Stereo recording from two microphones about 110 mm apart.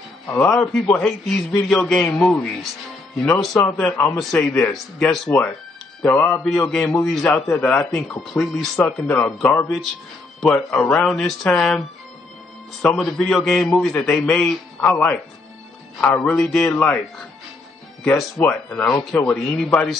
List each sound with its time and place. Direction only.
0.3 s a man's voice: 10° left (ahead or behind)
6.0 s a man's voice: 15° left (ahead or behind)
12.9 s a man's voice: centre (ahead or behind)
18.4 s speech: 15° left (ahead or behind)